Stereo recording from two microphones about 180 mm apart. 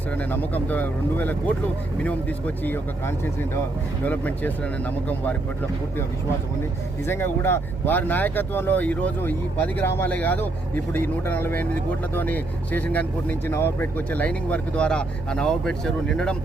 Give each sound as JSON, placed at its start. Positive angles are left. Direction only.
{"t": 0.2, "sound": "speech", "side_deg": 10}
{"t": 7.0, "sound": "speech", "side_deg": 10}